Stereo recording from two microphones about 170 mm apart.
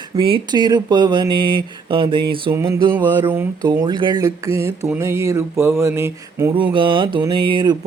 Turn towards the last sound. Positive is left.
turn(degrees=-25)  # may be behind; listen again after turning